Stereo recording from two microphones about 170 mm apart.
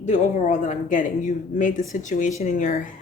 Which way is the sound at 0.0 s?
45° left (ahead or behind).